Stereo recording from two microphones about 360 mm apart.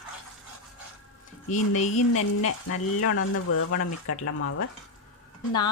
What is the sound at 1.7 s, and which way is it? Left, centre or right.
Speech, left.